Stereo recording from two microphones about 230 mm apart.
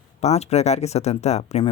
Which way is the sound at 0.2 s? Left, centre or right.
Left.